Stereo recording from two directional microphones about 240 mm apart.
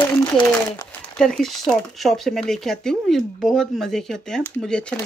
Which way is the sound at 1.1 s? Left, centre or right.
Centre.